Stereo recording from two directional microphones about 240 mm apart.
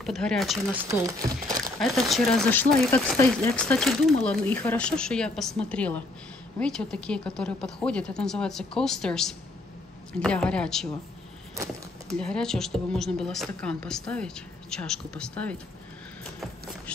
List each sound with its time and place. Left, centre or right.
0.0 s speech: centre
0.8 s speech: centre
1.6 s speech: centre
12.2 s speech: centre
16.3 s vehicle: centre